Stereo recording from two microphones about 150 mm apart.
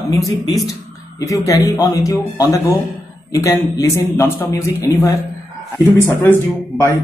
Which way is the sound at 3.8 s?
20° left (ahead or behind).